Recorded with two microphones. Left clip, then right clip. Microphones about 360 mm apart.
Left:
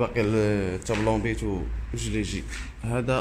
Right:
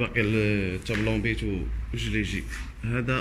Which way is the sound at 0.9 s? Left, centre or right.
Left.